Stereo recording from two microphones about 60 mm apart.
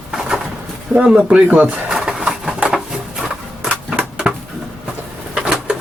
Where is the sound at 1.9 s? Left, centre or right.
Centre.